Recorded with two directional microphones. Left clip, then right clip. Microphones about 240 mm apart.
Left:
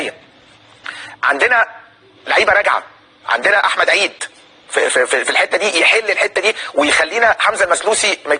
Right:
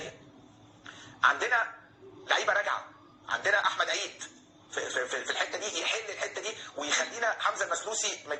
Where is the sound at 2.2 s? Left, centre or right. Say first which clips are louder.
Left 15 dB; left.